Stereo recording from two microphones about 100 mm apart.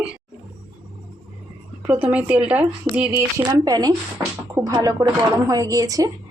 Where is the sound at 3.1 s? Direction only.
40° right (ahead or behind).